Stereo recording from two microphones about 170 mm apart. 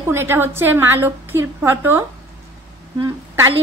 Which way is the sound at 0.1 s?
15° right (ahead or behind).